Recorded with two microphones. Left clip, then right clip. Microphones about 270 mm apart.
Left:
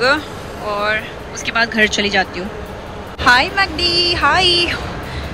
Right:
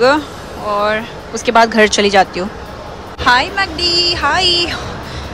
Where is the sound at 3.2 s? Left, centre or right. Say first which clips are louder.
Even; centre.